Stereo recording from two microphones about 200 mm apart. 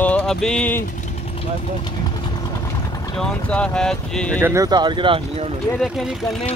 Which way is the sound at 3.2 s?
5° left (ahead or behind).